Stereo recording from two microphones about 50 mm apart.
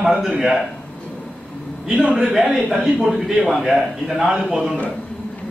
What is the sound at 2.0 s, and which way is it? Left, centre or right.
Speech, right.